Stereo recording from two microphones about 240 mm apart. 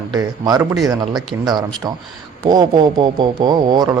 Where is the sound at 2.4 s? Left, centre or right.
Centre.